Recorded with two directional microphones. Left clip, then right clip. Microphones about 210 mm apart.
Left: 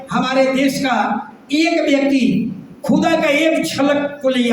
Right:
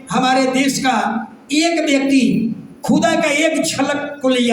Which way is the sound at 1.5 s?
55° right (ahead or behind).